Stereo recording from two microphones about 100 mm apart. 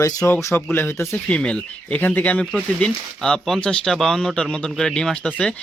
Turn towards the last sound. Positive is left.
turn(degrees=10)  # may be behind; listen again after turning